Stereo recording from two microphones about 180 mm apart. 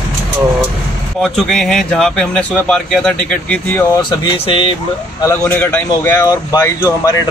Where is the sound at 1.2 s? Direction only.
Centre (ahead or behind); by 4.1 s 20° left (ahead or behind).